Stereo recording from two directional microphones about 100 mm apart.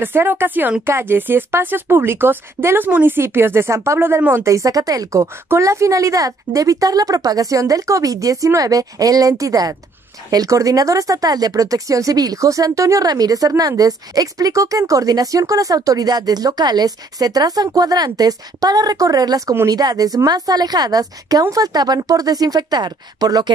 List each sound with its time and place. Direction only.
0.0 s speech: 20° right (ahead or behind); by 23.5 s 40° right (ahead or behind)